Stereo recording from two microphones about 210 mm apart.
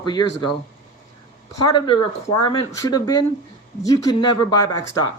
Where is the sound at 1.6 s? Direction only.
20° left (ahead or behind).